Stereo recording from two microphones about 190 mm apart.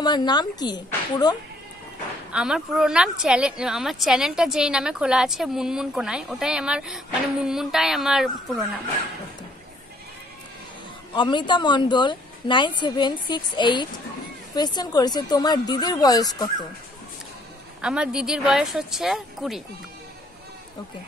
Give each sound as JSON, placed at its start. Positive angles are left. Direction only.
{"t": 0.0, "sound": "a woman's voice", "side_deg": 20}
{"t": 2.3, "sound": "a woman's voice", "side_deg": -5}
{"t": 11.1, "sound": "a woman's voice", "side_deg": 25}
{"t": 17.8, "sound": "a woman's voice", "side_deg": -5}